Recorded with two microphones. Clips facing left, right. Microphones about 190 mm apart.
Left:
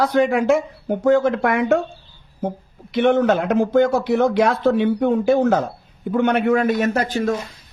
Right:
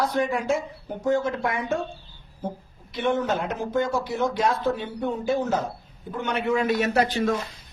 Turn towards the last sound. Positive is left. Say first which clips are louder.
# left 3 dB
turn(degrees=45)  # may be behind; listen again after turning